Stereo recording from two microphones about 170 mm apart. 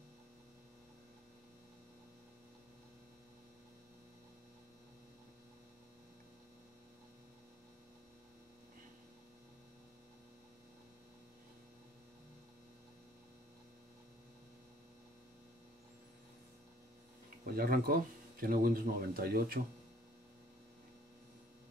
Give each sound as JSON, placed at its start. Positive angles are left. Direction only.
{"t": 17.5, "sound": "speech", "side_deg": -60}